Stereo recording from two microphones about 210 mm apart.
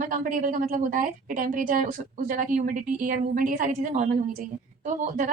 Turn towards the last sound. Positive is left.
turn(degrees=-40)  # may be behind; listen again after turning